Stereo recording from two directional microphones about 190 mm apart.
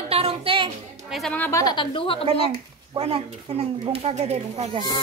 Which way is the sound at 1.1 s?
5° left (ahead or behind).